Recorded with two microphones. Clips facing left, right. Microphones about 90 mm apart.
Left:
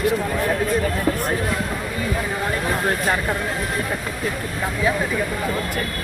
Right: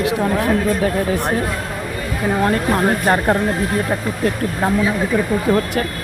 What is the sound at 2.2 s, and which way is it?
Speech, 55° right (ahead or behind).